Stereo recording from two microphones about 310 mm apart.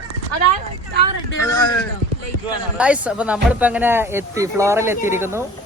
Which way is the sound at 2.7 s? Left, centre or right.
Centre.